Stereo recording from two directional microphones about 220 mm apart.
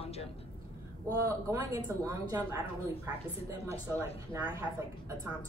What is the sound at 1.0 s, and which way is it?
Speech, 15° right (ahead or behind).